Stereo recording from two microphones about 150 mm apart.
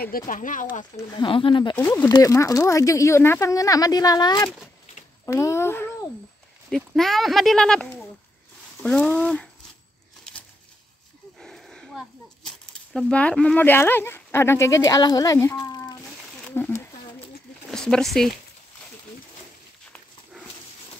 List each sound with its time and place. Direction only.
0.3 s speech: 60° left (ahead or behind)
1.1 s speech: 35° left (ahead or behind); by 5.9 s 15° left (ahead or behind)
6.7 s speech: centre (ahead or behind)
11.3 s a sound: centre (ahead or behind)
12.4 s speech: 5° left (ahead or behind); by 16.0 s 25° left (ahead or behind)
16.4 s a sound: 15° left (ahead or behind)
17.6 s speech: 5° left (ahead or behind)